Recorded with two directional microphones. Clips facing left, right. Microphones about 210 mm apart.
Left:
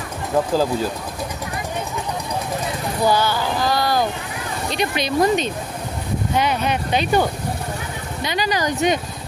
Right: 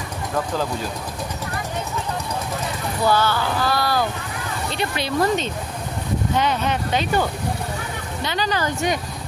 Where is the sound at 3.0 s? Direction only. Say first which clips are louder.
Left 1 dB; 15° left (ahead or behind).